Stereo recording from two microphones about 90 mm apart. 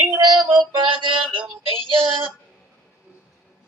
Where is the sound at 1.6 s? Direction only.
75° right (ahead or behind).